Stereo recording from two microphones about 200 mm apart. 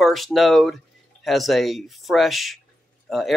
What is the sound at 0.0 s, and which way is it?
Speech, centre (ahead or behind).